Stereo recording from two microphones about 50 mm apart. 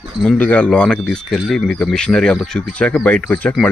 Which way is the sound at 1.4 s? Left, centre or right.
Centre.